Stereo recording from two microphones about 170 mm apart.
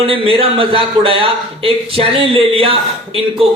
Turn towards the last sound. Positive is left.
turn(degrees=-30)  # may be behind; listen again after turning